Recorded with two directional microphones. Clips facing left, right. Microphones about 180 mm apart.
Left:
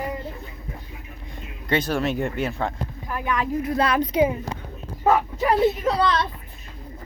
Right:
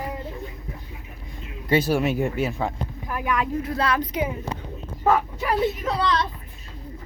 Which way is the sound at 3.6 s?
20° left (ahead or behind).